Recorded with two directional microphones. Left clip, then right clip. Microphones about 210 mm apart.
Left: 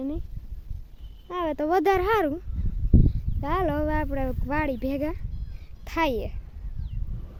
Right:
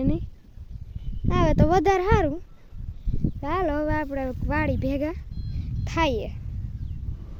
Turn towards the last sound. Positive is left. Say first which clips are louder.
# right 1 dB
turn(degrees=-5)  # may be behind; listen again after turning